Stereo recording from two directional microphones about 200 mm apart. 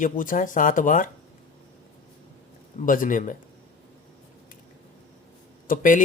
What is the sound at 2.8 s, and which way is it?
Speech, 40° left (ahead or behind).